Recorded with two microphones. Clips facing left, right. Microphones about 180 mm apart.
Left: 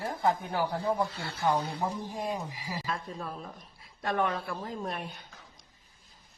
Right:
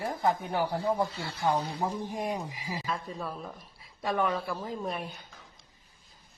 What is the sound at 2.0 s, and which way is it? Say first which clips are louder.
Speech: right 1 dB; 15° right (ahead or behind).